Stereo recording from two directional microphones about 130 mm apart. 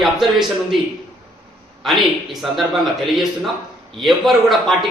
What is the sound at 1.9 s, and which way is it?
Speech, centre (ahead or behind).